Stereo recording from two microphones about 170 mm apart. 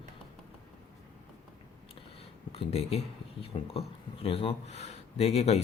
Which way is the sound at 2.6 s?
35° left (ahead or behind).